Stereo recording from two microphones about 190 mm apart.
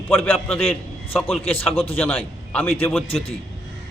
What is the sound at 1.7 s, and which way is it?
Speech, 30° left (ahead or behind).